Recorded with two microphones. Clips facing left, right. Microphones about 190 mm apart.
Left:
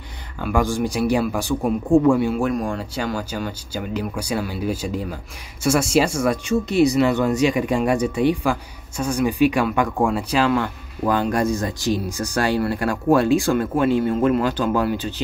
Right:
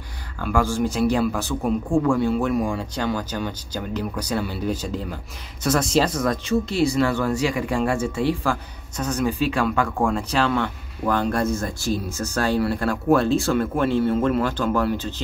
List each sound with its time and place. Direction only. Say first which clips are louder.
0.4 s speech: left 1 dB; 15° left (ahead or behind)